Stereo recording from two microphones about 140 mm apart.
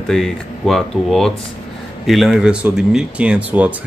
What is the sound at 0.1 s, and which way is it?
Speech, centre (ahead or behind).